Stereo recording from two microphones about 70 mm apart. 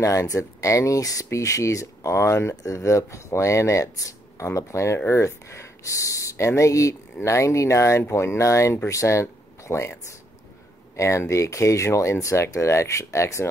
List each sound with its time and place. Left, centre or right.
0.0 s speech: left
11.0 s speech: left